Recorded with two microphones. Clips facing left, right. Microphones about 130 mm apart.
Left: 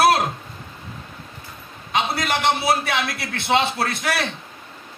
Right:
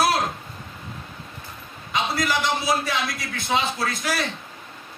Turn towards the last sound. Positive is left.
turn(degrees=65)  # may be behind; listen again after turning